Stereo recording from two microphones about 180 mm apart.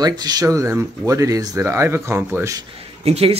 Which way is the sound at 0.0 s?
20° right (ahead or behind).